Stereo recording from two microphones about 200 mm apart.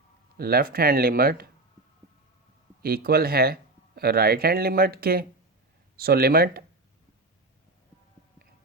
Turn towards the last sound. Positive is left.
turn(degrees=-50)  # may be behind; listen again after turning